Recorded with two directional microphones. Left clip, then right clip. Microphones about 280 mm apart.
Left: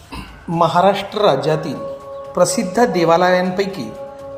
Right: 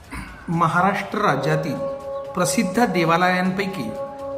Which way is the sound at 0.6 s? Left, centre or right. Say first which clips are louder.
Left 5 dB; centre.